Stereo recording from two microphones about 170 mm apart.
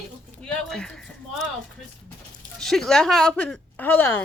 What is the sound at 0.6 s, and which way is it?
Speech, 5° left (ahead or behind).